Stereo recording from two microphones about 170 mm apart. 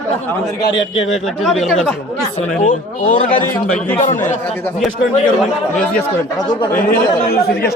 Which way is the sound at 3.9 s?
50° left (ahead or behind).